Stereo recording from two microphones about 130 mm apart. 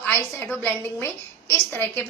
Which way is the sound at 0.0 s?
15° left (ahead or behind).